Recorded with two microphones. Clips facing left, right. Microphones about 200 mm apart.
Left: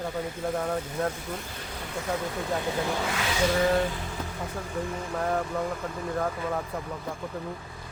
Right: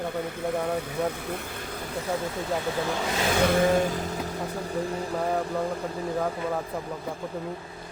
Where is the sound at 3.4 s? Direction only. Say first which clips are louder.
Right 2 dB; 50° right (ahead or behind).